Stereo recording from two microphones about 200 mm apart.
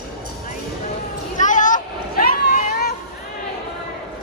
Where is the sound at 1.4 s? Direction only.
40° left (ahead or behind).